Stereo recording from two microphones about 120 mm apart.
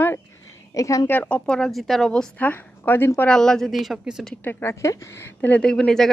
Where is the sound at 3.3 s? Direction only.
5° left (ahead or behind).